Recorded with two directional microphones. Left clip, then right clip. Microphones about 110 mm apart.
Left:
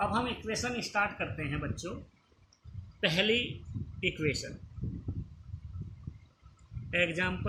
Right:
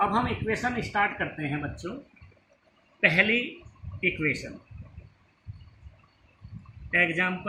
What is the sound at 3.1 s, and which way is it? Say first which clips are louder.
Speech: right 5 dB; 50° left (ahead or behind).